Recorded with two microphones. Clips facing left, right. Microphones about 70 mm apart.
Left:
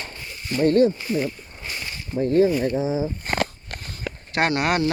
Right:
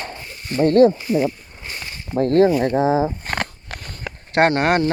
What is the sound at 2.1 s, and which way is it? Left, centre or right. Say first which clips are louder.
Speech: right 3 dB; right.